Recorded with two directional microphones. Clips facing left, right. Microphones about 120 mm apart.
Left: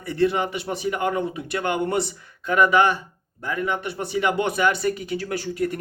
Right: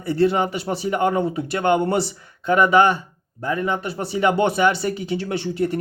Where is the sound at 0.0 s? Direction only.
30° right (ahead or behind).